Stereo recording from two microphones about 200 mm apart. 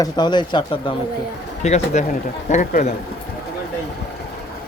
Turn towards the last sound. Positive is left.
turn(degrees=40)  # may be behind; listen again after turning